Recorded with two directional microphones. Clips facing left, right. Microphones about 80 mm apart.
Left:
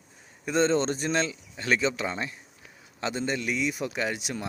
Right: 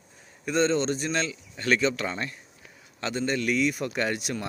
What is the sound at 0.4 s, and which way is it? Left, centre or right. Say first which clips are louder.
Speech: even; left.